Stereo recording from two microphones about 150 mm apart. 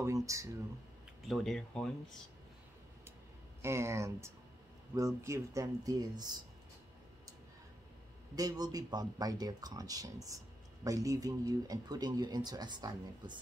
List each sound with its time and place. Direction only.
0.0 s speech: 20° right (ahead or behind)
1.2 s speech: centre (ahead or behind)
3.6 s speech: 20° right (ahead or behind)
8.4 s speech: 25° right (ahead or behind)